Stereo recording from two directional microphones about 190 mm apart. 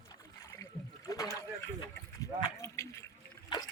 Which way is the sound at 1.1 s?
20° left (ahead or behind).